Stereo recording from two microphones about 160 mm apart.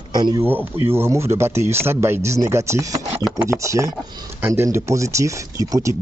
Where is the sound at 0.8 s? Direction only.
15° right (ahead or behind).